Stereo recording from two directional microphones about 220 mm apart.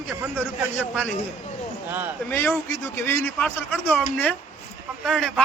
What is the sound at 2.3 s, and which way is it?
A man's voice, 10° left (ahead or behind).